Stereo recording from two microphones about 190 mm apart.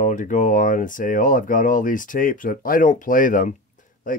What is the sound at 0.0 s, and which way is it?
Speech, 40° left (ahead or behind).